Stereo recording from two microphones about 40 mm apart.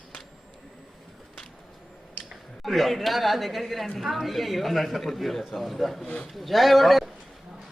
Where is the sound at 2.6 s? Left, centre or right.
Centre.